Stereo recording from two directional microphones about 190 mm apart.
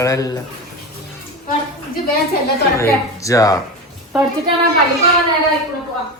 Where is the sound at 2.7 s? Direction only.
15° left (ahead or behind).